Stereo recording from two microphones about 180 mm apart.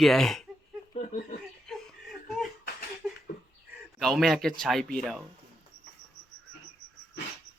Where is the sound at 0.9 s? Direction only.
45° left (ahead or behind).